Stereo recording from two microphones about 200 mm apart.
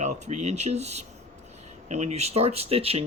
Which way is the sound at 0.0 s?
35° right (ahead or behind).